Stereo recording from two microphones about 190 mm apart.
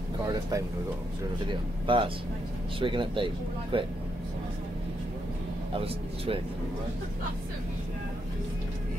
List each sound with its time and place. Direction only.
0.3 s speech: 15° right (ahead or behind)
5.8 s speech: 30° right (ahead or behind)